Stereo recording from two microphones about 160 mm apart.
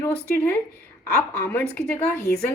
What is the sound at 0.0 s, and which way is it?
Speech, 15° left (ahead or behind).